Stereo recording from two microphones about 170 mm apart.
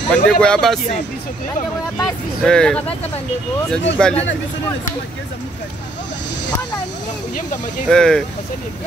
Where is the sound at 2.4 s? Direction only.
5° left (ahead or behind).